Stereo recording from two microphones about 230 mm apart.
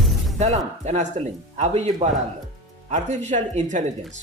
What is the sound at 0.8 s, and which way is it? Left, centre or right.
Speech, right.